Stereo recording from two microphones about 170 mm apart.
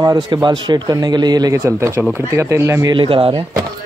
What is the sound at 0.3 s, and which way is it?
A man's voice, 25° right (ahead or behind).